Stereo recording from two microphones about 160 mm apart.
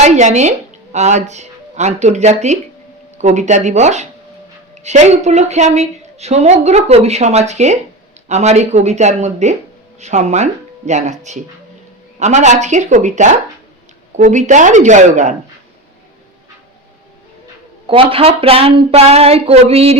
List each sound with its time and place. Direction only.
0.0 s a woman's voice: 45° right (ahead or behind)
17.8 s a woman's voice: 35° right (ahead or behind)